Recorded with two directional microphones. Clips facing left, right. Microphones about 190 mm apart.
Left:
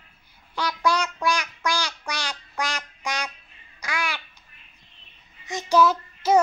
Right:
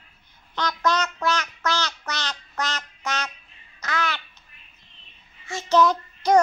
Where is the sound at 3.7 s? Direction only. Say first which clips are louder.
Right 2 dB; 10° left (ahead or behind).